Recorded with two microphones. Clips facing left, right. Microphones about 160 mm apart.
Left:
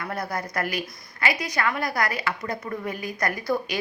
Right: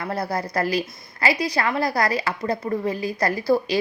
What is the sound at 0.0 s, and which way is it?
A woman's voice, 30° right (ahead or behind).